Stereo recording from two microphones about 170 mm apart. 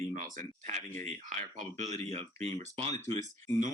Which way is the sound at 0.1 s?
45° right (ahead or behind).